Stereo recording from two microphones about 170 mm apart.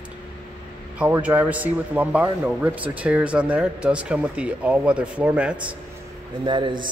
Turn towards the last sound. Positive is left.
turn(degrees=-25)  # may be behind; listen again after turning